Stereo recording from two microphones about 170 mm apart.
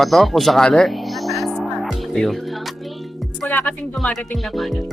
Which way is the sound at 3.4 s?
10° left (ahead or behind).